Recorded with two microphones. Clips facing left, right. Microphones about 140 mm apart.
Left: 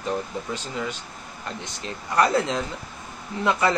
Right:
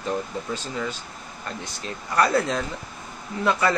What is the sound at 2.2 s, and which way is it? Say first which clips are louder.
Speech: even; 20° left (ahead or behind).